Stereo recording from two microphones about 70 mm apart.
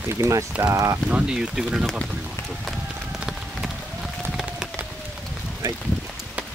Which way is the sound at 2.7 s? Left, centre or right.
Centre.